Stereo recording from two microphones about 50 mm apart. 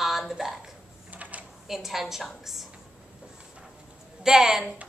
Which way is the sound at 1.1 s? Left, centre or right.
Right.